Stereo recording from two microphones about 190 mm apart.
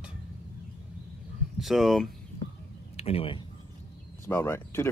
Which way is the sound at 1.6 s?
Centre (ahead or behind).